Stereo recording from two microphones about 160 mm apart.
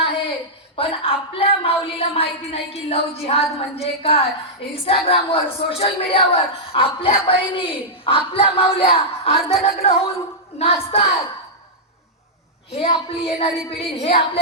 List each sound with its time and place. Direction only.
0.0 s a sound: 35° left (ahead or behind)
0.8 s a woman's voice: 35° left (ahead or behind)
12.7 s a woman's voice: 35° left (ahead or behind)